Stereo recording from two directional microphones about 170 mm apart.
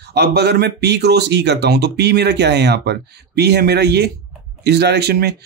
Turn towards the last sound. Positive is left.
turn(degrees=-75)  # may be behind; listen again after turning